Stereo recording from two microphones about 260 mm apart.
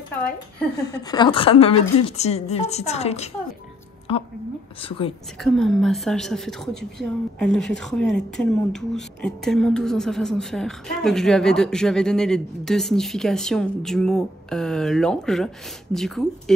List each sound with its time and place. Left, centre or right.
0.8 s a woman's voice: centre
5.4 s a woman's voice: centre